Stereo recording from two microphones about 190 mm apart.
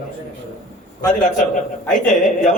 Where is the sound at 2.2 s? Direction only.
45° left (ahead or behind).